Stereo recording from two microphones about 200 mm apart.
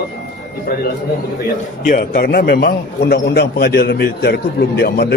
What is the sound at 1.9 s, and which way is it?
A man's voice, 45° left (ahead or behind).